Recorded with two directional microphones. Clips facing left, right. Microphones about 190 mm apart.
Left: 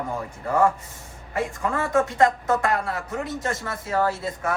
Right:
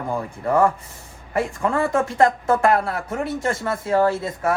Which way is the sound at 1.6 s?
30° right (ahead or behind).